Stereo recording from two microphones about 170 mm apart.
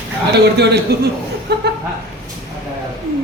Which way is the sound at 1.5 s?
75° right (ahead or behind).